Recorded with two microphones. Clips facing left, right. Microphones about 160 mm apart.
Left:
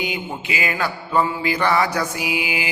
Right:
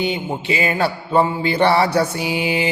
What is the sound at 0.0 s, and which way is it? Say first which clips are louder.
Music: right 5 dB; 30° right (ahead or behind).